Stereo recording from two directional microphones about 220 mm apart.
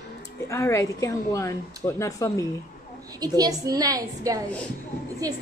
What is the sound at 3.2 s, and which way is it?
A woman's voice, 15° right (ahead or behind).